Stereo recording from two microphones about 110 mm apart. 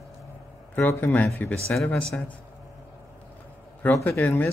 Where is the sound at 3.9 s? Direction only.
25° left (ahead or behind).